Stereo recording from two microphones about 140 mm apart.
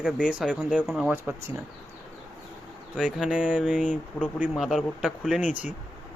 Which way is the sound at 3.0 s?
5° right (ahead or behind).